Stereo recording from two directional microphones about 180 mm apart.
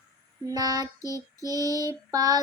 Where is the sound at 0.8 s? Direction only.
20° left (ahead or behind).